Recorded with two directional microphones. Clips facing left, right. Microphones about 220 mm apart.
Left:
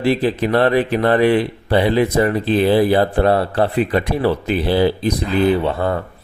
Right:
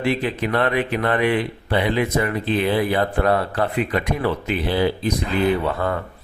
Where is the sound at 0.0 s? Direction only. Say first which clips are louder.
Left 5 dB; 35° left (ahead or behind).